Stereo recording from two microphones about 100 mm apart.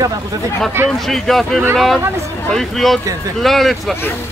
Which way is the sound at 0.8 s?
25° right (ahead or behind).